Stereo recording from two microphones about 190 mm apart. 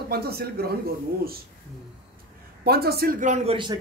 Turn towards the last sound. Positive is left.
turn(degrees=-30)  # may be behind; listen again after turning